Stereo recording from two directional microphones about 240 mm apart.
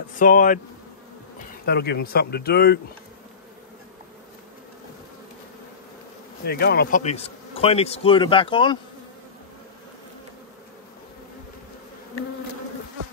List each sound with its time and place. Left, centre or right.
0.1 s speech: left
1.7 s speech: left
6.4 s speech: left